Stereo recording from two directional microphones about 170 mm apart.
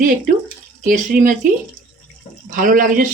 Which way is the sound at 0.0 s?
50° right (ahead or behind).